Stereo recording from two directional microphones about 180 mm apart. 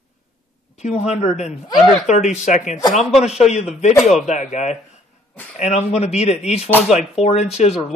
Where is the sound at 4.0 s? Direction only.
Centre (ahead or behind).